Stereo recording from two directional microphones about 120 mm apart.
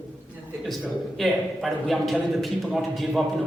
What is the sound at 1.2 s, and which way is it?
A woman's voice, centre (ahead or behind).